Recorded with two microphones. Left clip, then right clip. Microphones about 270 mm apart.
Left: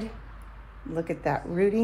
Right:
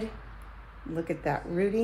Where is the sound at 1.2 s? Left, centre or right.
Centre.